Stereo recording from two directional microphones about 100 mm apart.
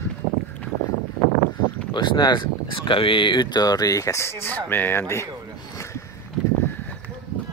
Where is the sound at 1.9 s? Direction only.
50° left (ahead or behind); by 5.3 s 25° left (ahead or behind).